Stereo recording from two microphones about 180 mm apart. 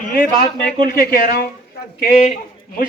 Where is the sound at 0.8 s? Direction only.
55° left (ahead or behind).